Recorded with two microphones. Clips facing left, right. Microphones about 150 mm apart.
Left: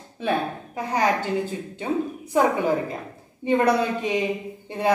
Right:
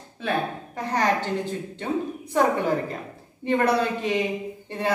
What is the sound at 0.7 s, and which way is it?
Speech, 10° left (ahead or behind).